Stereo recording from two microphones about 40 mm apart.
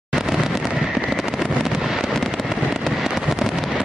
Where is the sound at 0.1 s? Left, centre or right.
Centre.